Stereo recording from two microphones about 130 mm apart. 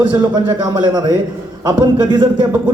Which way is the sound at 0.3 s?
35° right (ahead or behind).